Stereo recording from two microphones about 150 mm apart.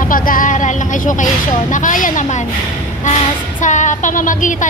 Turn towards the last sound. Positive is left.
turn(degrees=60)  # may be behind; listen again after turning